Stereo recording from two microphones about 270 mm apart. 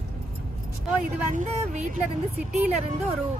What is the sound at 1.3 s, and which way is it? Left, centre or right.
Speech, right.